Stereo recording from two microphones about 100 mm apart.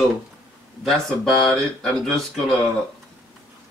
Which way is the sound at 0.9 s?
Centre (ahead or behind).